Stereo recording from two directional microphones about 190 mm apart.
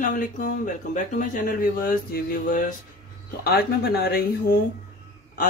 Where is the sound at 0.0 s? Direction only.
45° left (ahead or behind).